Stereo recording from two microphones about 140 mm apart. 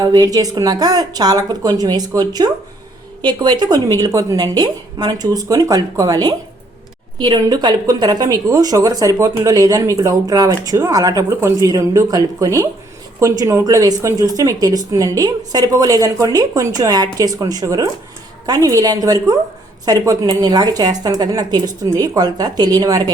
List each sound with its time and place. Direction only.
0.0 s a woman's voice: 25° right (ahead or behind)